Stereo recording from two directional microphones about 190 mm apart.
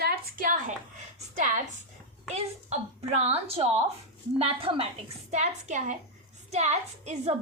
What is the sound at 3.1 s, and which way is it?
A woman's voice, 35° right (ahead or behind).